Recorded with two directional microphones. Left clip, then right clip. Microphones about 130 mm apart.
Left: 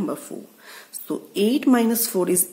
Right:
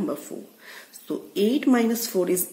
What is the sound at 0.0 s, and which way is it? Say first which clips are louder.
Speech: left 1 dB; 30° left (ahead or behind).